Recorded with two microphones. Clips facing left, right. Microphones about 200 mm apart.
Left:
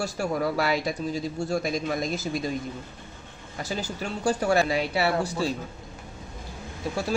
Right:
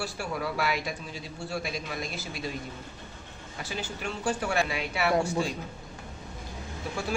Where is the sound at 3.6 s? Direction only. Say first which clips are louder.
Left 4 dB; 40° left (ahead or behind).